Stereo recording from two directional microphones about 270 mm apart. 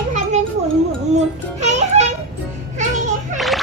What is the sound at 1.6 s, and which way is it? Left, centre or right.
Music, right.